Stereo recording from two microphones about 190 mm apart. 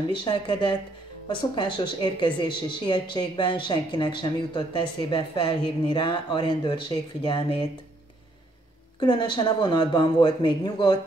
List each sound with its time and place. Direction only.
0.2 s speech: 25° left (ahead or behind)
9.0 s speech: 25° left (ahead or behind)